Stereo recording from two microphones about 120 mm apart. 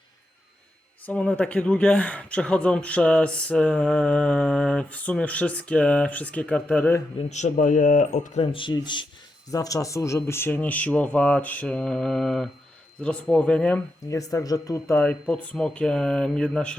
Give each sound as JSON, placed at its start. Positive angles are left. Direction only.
{"t": 1.0, "sound": "speech", "side_deg": 10}
{"t": 7.3, "sound": "speech", "side_deg": 80}
{"t": 8.5, "sound": "speech", "side_deg": 40}
{"t": 9.5, "sound": "speech", "side_deg": 30}
{"t": 14.1, "sound": "speech", "side_deg": 25}
{"t": 14.9, "sound": "speech", "side_deg": 10}